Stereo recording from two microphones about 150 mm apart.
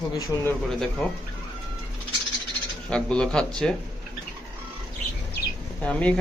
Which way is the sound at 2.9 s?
5° left (ahead or behind).